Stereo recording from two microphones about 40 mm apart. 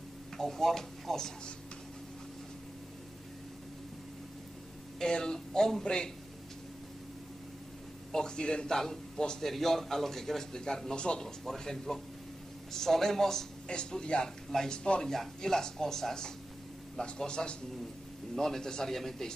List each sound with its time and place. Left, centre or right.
0.4 s a man's voice: centre
4.9 s a man's voice: centre
8.1 s a man's voice: centre
9.4 s a man's voice: centre
11.0 s speech: left
11.2 s a man's voice: centre
13.7 s speech: left
15.0 s a man's voice: centre